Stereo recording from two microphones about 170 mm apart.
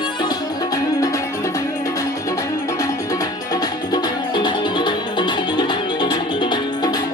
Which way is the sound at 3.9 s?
25° left (ahead or behind).